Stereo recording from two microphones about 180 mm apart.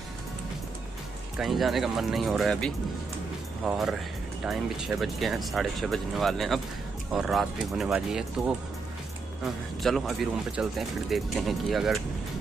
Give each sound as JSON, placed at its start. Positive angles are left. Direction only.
{"t": 1.4, "sound": "speech", "side_deg": 0}
{"t": 9.8, "sound": "speech", "side_deg": 0}